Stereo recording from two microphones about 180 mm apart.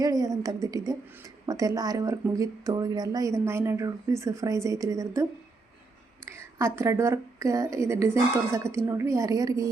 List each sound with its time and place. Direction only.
0.0 s a woman's voice: 20° right (ahead or behind)
6.7 s speech: 15° right (ahead or behind)